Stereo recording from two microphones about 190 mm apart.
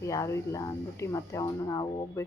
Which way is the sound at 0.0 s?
15° left (ahead or behind).